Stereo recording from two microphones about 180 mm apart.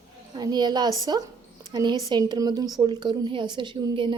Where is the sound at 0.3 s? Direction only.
25° right (ahead or behind).